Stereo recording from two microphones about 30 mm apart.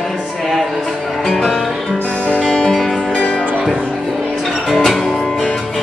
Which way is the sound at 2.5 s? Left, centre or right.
Left.